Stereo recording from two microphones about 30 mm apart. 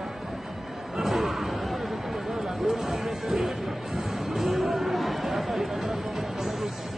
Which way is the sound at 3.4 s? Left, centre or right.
Centre.